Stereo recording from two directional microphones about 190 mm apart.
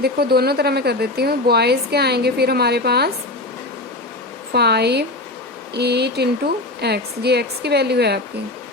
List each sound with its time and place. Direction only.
0.0 s speech: 55° right (ahead or behind)
4.5 s speech: 60° right (ahead or behind)